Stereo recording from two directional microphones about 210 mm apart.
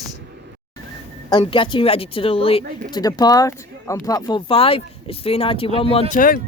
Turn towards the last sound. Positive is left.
turn(degrees=40)  # may be behind; listen again after turning